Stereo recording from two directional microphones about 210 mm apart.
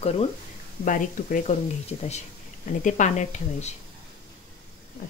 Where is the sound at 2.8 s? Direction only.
35° left (ahead or behind).